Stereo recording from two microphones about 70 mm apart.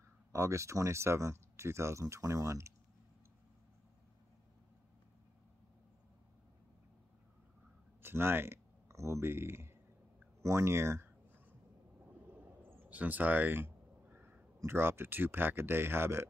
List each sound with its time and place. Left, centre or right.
0.3 s speech: right
8.0 s speech: right
12.3 s a sound: right
14.6 s speech: right